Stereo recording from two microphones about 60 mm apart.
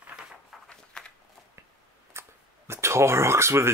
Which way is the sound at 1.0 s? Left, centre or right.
Centre.